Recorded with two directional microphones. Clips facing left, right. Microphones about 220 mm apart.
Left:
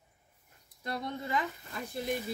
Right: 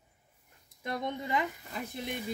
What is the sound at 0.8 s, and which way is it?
Speech, 20° right (ahead or behind).